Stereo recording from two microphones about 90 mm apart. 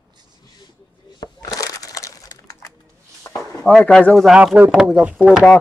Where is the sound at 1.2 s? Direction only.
45° left (ahead or behind).